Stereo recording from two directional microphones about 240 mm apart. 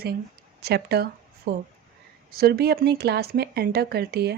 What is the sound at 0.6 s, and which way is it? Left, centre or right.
Speech, right.